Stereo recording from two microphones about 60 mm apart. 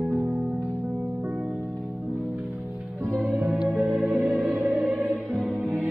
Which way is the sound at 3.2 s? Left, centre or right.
Right.